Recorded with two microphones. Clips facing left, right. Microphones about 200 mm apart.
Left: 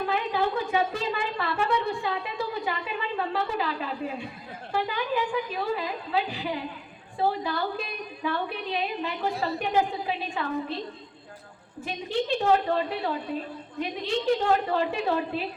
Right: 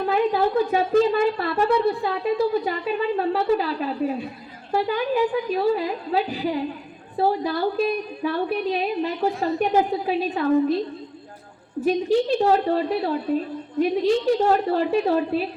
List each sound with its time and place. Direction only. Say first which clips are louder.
0.1 s a woman's voice: right 9 dB; 40° right (ahead or behind)
11.9 s a woman's voice: right 9 dB; 40° right (ahead or behind)